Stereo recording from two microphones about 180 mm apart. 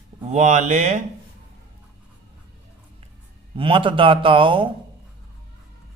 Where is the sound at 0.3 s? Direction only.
40° right (ahead or behind).